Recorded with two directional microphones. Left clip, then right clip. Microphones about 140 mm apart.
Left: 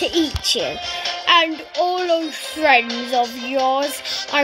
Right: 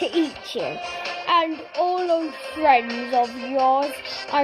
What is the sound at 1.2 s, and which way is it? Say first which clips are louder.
Music: left 5 dB; 10° left (ahead or behind).